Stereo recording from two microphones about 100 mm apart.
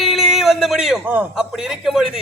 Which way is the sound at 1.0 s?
20° right (ahead or behind).